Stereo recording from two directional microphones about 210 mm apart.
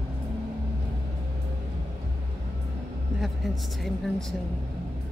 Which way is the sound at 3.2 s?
Centre (ahead or behind).